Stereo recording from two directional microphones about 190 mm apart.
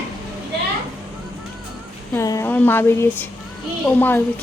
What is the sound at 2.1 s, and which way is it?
A woman's voice, 15° left (ahead or behind).